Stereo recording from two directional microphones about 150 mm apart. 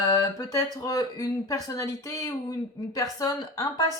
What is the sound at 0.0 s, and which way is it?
Speech, 25° left (ahead or behind).